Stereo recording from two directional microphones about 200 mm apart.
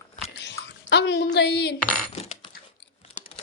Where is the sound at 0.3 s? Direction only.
60° left (ahead or behind).